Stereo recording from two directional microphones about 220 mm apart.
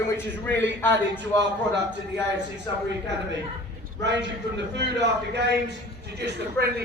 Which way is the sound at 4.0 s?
50° right (ahead or behind).